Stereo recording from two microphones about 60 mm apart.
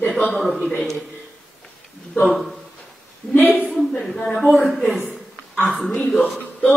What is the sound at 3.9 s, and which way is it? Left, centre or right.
Speech, centre.